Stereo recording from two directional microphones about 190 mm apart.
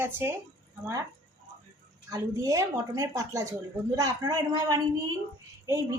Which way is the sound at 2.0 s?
15° right (ahead or behind).